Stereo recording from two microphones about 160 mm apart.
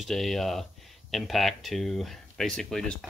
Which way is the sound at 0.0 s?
Centre (ahead or behind).